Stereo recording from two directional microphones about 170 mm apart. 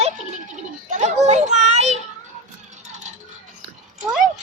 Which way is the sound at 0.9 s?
45° right (ahead or behind).